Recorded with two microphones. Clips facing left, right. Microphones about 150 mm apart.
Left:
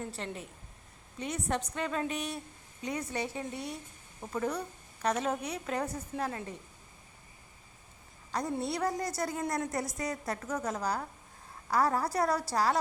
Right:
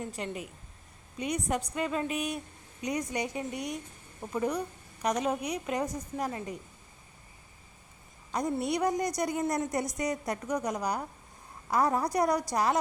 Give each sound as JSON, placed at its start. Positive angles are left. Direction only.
{"t": 0.0, "sound": "a woman's voice", "side_deg": -10}
{"t": 8.3, "sound": "a woman's voice", "side_deg": -20}